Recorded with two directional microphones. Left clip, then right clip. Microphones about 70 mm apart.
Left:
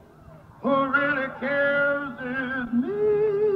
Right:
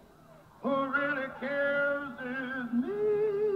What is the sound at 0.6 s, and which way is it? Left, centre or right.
Male singing, right.